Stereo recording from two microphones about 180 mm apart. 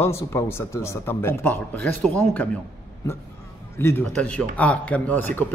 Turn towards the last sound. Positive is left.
turn(degrees=10)  # may be behind; listen again after turning